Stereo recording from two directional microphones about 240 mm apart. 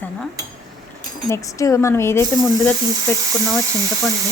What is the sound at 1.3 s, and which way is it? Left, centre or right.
Speech, centre.